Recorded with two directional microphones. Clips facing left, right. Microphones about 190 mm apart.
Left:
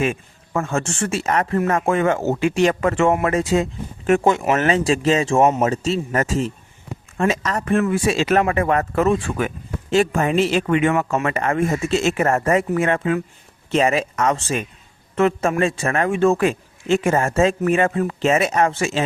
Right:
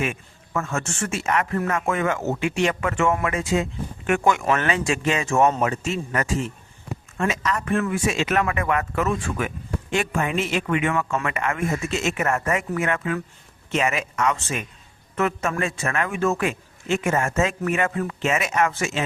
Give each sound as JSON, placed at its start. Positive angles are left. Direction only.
{"t": 0.0, "sound": "speech", "side_deg": 30}